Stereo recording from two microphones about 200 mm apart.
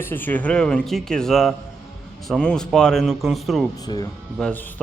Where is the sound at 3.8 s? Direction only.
20° left (ahead or behind).